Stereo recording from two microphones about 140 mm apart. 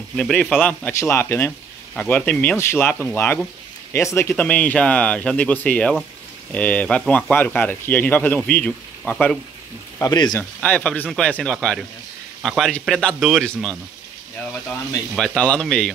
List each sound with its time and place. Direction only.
0.1 s speech: 5° left (ahead or behind)
9.9 s speech: 30° left (ahead or behind)
10.3 s speech: 10° left (ahead or behind)
15.1 s speech: 5° left (ahead or behind)